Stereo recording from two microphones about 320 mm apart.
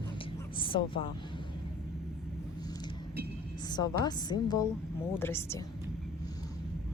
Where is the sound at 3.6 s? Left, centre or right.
Centre.